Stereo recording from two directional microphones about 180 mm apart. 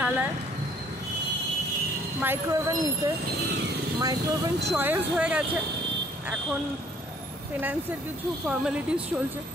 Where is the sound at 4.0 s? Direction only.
20° right (ahead or behind).